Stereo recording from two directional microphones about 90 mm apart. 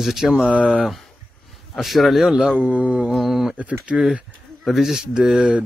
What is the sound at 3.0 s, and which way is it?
Speech, centre (ahead or behind).